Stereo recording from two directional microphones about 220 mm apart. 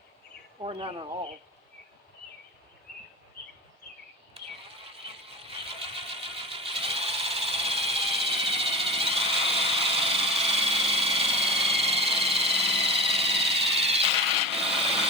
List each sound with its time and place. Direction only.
0.6 s speech: 25° right (ahead or behind)
4.4 s insect: 25° right (ahead or behind)
4.9 s vehicle: 25° right (ahead or behind)
14.6 s wood: 25° right (ahead or behind)